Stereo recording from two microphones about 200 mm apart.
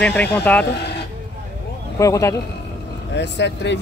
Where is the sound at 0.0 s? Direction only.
5° left (ahead or behind).